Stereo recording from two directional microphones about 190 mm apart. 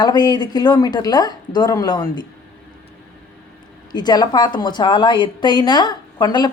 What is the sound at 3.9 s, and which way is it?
A woman's voice, 20° left (ahead or behind).